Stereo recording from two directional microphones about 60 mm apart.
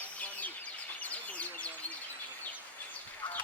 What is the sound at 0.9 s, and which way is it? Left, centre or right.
Bird, left.